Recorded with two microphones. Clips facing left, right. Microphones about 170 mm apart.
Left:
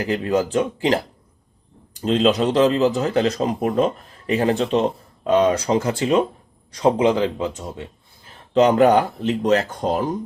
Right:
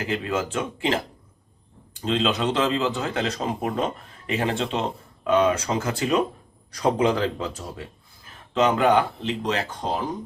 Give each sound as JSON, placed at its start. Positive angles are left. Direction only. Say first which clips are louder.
{"t": 0.0, "sound": "a man's voice", "louder": "left 6 dB", "side_deg": 35}
{"t": 8.5, "sound": "speech", "louder": "left 5 dB", "side_deg": 35}